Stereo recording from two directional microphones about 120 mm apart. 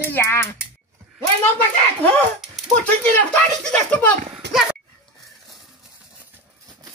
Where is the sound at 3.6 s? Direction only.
10° left (ahead or behind).